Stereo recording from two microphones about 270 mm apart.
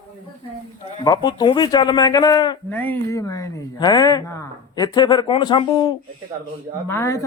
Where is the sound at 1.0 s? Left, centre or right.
Centre.